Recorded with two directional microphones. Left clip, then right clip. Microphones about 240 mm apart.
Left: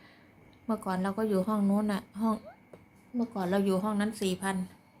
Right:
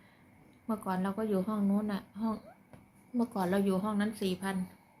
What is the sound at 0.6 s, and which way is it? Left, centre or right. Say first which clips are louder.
A woman's voice: left 3 dB; centre.